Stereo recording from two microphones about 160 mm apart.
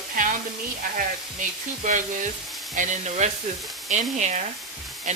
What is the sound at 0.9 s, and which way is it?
Speech, 55° right (ahead or behind).